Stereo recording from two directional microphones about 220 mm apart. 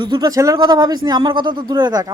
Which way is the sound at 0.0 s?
20° right (ahead or behind).